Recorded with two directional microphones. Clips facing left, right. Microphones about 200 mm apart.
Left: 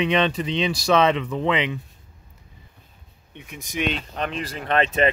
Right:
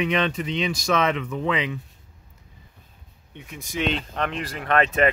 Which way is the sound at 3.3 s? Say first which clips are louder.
Right 1 dB; 20° left (ahead or behind).